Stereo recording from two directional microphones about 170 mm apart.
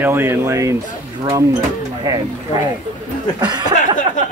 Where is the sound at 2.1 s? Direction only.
20° right (ahead or behind).